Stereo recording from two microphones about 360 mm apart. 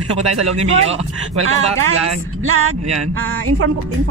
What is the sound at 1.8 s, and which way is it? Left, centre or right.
Speech, right.